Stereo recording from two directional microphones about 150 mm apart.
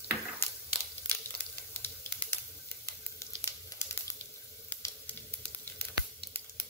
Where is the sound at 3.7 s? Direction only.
25° left (ahead or behind).